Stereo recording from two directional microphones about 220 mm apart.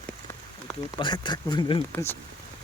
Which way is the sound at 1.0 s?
20° left (ahead or behind).